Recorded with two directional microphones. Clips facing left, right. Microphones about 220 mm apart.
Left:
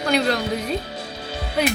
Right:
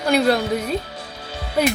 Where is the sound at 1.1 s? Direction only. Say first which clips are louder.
Left 1 dB; 20° left (ahead or behind).